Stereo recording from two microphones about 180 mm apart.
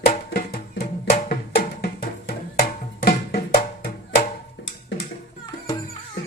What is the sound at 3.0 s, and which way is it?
Music, 60° left (ahead or behind).